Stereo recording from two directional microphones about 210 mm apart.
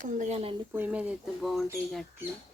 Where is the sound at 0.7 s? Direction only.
5° right (ahead or behind).